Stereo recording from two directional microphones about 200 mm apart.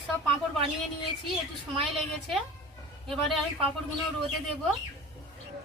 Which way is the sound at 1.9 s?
Centre (ahead or behind).